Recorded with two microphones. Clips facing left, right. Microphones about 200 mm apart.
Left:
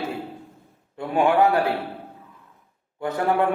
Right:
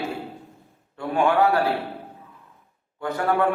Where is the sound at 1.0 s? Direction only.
20° left (ahead or behind).